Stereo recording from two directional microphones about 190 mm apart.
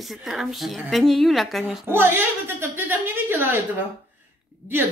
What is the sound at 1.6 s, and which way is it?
A woman's voice, 10° right (ahead or behind).